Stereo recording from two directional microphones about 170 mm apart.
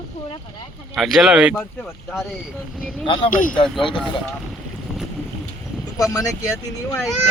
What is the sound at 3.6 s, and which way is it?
Speech, 30° left (ahead or behind).